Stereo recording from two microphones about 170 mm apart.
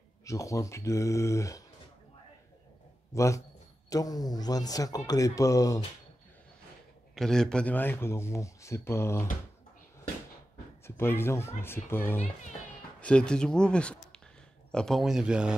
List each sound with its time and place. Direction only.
0.2 s speech: 20° left (ahead or behind)
3.1 s speech: 15° left (ahead or behind)
7.2 s speech: 5° left (ahead or behind)
11.0 s speech: 15° left (ahead or behind); by 15.5 s 5° right (ahead or behind)